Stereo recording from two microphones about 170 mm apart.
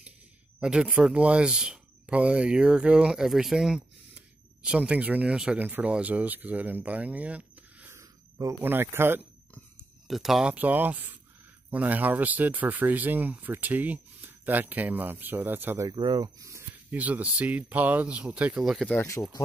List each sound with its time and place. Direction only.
0.6 s speech: 5° right (ahead or behind)
10.0 s speech: centre (ahead or behind)
15.9 s speech: 25° right (ahead or behind); by 18.9 s centre (ahead or behind)
18.9 s speech: 20° left (ahead or behind)